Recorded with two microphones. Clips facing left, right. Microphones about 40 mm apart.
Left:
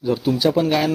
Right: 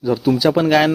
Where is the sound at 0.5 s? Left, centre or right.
Right.